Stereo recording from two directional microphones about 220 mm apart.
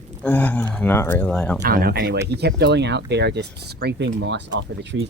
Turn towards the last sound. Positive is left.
turn(degrees=-55)  # may be behind; listen again after turning